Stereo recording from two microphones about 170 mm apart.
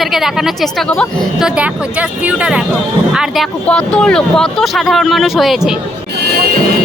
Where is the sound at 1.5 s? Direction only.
5° right (ahead or behind).